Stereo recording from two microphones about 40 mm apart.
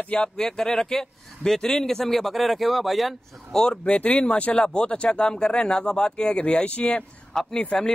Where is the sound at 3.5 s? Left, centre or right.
Centre.